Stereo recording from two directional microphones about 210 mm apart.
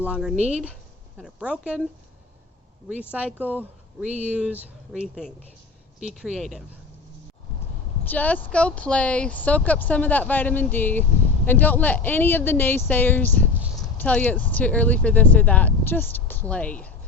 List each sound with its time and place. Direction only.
0.1 s speech: 5° right (ahead or behind)
0.3 s speech: 30° right (ahead or behind)
1.2 s speech: 5° right (ahead or behind)
3.1 s speech: 5° right (ahead or behind)
8.0 s speech: 10° left (ahead or behind)